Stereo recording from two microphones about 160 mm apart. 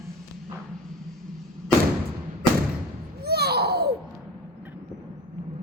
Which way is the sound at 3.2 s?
80° right.